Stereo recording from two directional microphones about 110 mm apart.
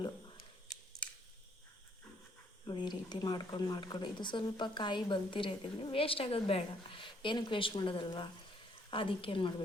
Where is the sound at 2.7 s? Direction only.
40° left (ahead or behind).